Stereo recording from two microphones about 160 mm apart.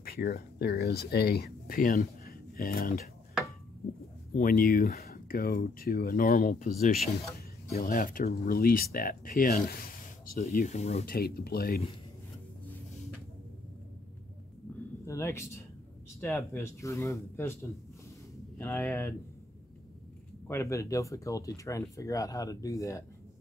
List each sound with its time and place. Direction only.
0.0 s speech: 80° left
4.3 s speech: 60° left (ahead or behind)
7.7 s speech: 65° left (ahead or behind)
10.5 s speech: 50° left (ahead or behind)
11.1 s speech: 70° left (ahead or behind)
15.0 s speech: 15° left (ahead or behind)
20.4 s speech: 15° left (ahead or behind)